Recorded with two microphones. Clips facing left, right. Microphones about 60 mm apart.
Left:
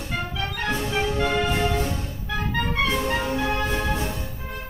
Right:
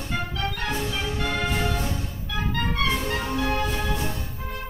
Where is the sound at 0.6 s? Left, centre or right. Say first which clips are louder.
Left 4 dB; left.